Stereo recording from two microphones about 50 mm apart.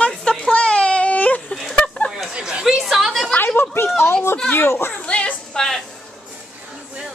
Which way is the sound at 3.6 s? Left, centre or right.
Left.